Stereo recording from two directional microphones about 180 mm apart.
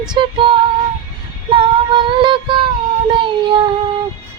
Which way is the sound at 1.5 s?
30° right (ahead or behind).